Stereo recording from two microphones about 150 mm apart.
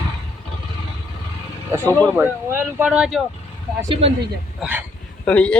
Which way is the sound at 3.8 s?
35° right (ahead or behind).